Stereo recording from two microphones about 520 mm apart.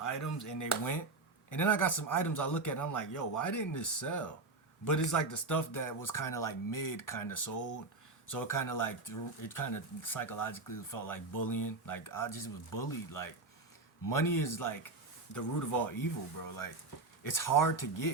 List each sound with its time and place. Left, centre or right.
0.0 s speech: left